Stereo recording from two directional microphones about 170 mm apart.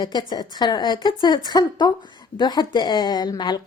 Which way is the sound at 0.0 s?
25° left (ahead or behind).